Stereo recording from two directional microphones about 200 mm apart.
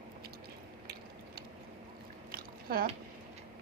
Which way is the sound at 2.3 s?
50° right (ahead or behind).